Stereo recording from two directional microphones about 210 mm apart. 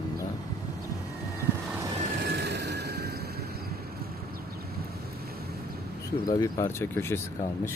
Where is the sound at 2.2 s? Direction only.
50° right (ahead or behind).